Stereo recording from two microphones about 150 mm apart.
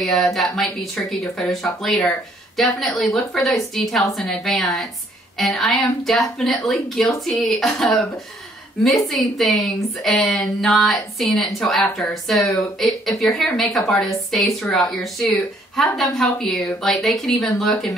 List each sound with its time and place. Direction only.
0.0 s a woman's voice: centre (ahead or behind)